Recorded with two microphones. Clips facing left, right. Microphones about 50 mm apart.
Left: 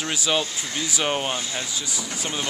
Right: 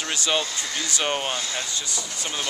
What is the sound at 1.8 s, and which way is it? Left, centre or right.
Speech, centre.